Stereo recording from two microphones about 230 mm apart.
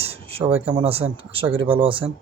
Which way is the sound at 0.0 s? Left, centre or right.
Right.